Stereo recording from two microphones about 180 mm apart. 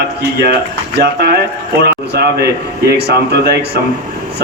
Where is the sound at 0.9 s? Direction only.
65° right (ahead or behind).